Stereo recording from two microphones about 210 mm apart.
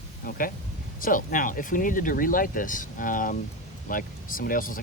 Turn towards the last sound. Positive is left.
turn(degrees=40)  # may be behind; listen again after turning